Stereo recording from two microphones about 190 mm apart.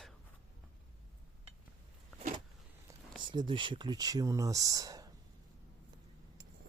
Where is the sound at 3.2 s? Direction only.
25° right (ahead or behind).